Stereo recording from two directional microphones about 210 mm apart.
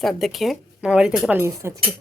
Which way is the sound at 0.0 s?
Centre (ahead or behind).